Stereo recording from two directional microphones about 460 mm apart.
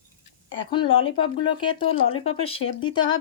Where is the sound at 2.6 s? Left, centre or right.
Left.